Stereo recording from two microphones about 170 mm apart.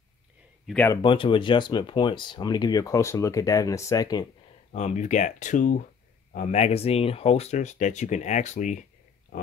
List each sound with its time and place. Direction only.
0.7 s speech: centre (ahead or behind)
1.0 s speech: 30° left (ahead or behind)
4.7 s speech: 45° left (ahead or behind)